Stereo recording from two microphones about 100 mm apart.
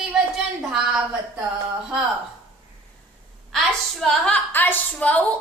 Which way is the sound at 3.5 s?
5° left (ahead or behind).